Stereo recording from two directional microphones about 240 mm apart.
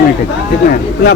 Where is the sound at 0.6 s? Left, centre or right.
Left.